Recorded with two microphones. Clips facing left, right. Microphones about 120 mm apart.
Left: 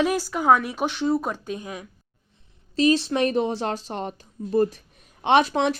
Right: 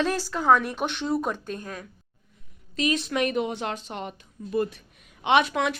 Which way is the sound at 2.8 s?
30° left (ahead or behind).